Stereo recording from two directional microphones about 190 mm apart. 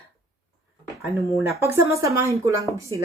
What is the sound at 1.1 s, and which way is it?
Speech, 15° right (ahead or behind).